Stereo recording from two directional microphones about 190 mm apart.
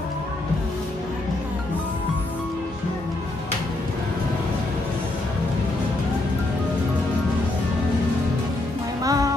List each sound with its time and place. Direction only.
9.0 s music: 20° right (ahead or behind)